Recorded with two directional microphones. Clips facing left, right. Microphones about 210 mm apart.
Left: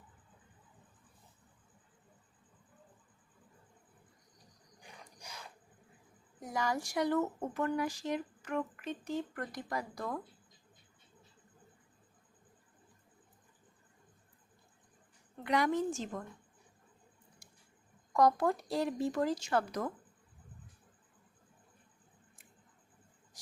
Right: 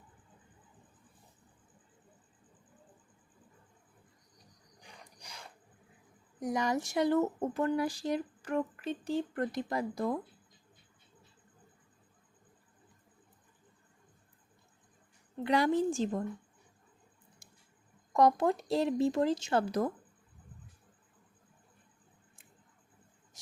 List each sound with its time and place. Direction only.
6.4 s speech: 20° right (ahead or behind)
15.4 s a woman's voice: 30° right (ahead or behind)
18.1 s speech: 20° right (ahead or behind)